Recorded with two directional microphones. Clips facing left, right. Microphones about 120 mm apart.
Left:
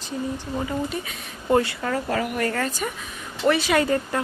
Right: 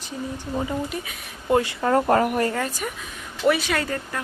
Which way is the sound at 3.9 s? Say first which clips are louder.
Left 6 dB; 20° left (ahead or behind).